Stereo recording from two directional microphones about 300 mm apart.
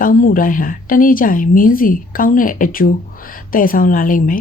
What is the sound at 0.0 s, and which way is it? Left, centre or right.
Speech, left.